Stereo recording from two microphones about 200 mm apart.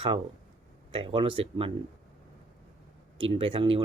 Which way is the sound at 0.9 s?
25° right (ahead or behind).